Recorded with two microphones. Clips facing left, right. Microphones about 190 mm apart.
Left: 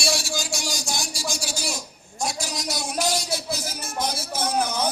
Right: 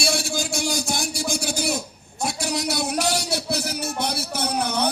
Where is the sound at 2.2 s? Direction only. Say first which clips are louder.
Right 4 dB; 65° right (ahead or behind).